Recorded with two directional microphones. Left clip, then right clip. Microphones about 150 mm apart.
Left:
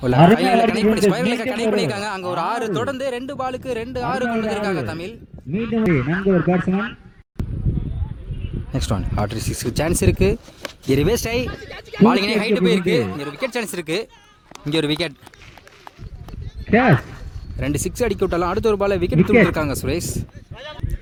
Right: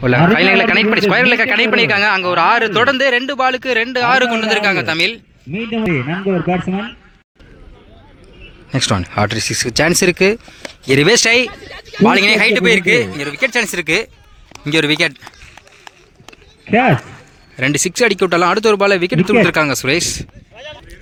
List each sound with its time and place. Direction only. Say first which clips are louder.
0.3 s a man's voice: right 6 dB; 5° left (ahead or behind)
5.5 s speech: right 2 dB; 45° right (ahead or behind)
8.7 s a man's voice: right 9 dB; centre (ahead or behind)
11.7 s a man's voice: right 2 dB; 90° left
12.0 s a man's voice: right 7 dB; centre (ahead or behind)
16.6 s speech: right 3 dB; 40° right (ahead or behind)
17.6 s a man's voice: right 8 dB; centre (ahead or behind)
19.2 s speech: even; 35° right (ahead or behind)
19.5 s a man's voice: right 8 dB; centre (ahead or behind)